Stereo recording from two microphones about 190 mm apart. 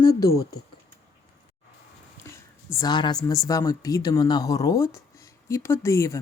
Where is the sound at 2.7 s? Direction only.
20° left (ahead or behind).